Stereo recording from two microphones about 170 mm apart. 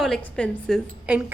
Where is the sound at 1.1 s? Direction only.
10° right (ahead or behind).